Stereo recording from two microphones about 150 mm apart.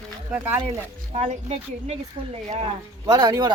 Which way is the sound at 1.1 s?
50° right (ahead or behind).